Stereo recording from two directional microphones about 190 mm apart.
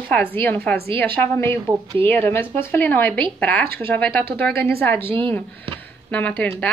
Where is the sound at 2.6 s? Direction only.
10° left (ahead or behind).